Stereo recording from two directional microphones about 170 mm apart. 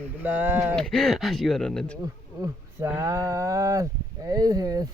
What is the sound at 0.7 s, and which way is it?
Speech, centre (ahead or behind).